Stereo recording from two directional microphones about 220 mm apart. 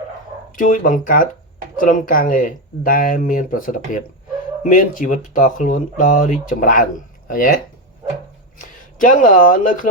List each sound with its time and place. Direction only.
0.5 s speech: 40° left (ahead or behind)
8.8 s speech: 35° left (ahead or behind)